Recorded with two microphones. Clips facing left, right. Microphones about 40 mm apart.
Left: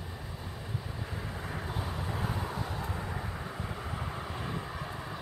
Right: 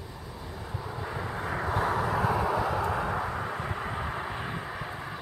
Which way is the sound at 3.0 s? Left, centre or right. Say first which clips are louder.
Right 9 dB; right.